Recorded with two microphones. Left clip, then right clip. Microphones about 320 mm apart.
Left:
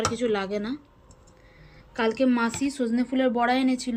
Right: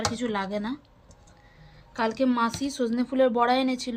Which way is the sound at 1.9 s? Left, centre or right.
Centre.